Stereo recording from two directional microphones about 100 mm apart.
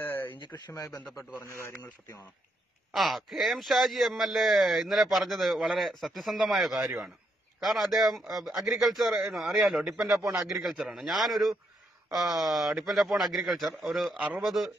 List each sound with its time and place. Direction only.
0.0 s a sound: 20° left (ahead or behind)
0.7 s a man's voice: 40° left (ahead or behind)
1.4 s a man's voice: 25° left (ahead or behind)
2.9 s a man's voice: centre (ahead or behind)
10.5 s a man's voice: centre (ahead or behind)